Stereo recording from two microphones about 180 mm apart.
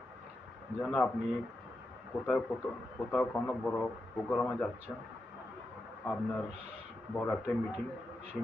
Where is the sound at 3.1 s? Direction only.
5° left (ahead or behind).